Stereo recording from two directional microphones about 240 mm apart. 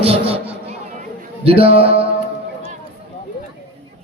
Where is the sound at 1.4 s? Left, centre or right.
Right.